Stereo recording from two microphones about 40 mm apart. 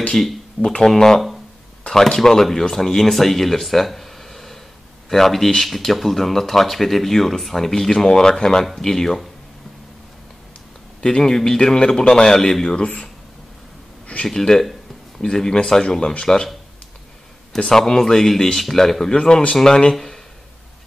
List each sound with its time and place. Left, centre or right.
0.1 s speech: centre
0.7 s speech: centre
11.0 s speech: centre
12.4 s speech: centre
14.2 s speech: centre
14.6 s a sound: centre
15.2 s speech: centre
17.7 s speech: centre